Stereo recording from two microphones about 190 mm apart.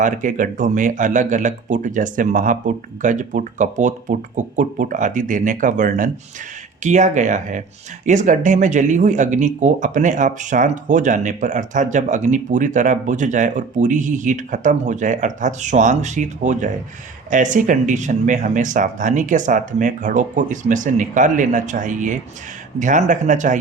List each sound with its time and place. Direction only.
0.0 s speech: 45° right (ahead or behind)